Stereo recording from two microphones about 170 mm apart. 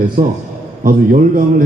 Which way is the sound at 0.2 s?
55° right (ahead or behind).